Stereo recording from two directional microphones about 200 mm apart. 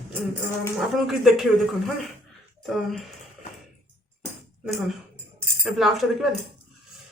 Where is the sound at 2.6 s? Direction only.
Centre (ahead or behind).